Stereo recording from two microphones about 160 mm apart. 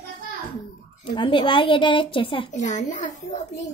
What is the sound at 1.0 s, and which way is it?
Speech, 35° left (ahead or behind).